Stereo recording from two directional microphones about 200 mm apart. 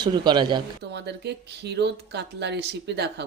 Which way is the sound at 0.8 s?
55° right (ahead or behind).